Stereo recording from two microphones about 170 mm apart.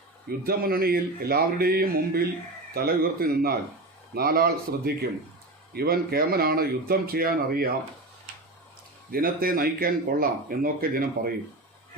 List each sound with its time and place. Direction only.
0.3 s speech: 60° right (ahead or behind)
9.1 s speech: 60° right (ahead or behind)